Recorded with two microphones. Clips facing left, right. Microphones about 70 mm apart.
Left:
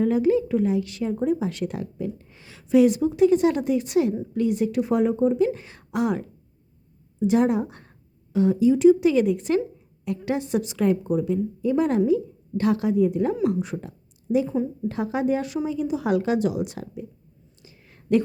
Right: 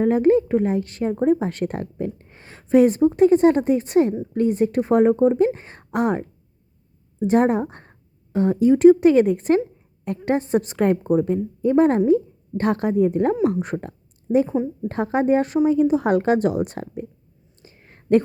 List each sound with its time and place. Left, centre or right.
0.0 s a woman's voice: right
14.4 s a woman's voice: right
14.8 s speech: right
17.6 s a sound: right